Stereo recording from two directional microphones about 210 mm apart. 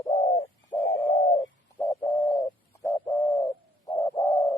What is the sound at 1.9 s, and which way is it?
Bird, 20° left (ahead or behind).